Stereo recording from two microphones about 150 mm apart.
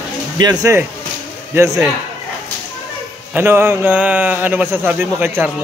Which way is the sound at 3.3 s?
15° right (ahead or behind).